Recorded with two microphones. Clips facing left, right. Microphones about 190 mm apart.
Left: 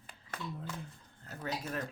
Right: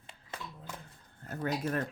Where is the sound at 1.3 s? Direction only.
55° right (ahead or behind).